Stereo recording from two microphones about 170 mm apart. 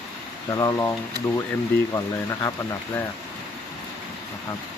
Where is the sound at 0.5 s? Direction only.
20° left (ahead or behind).